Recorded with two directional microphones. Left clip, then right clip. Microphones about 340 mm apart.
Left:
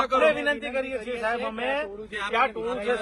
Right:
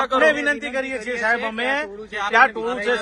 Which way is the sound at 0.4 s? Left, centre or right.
Centre.